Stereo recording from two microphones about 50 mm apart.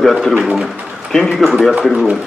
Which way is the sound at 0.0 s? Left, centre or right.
Centre.